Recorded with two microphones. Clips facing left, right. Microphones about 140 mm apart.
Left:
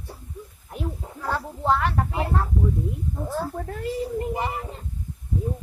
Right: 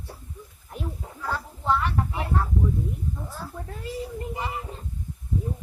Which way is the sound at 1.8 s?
45° left (ahead or behind).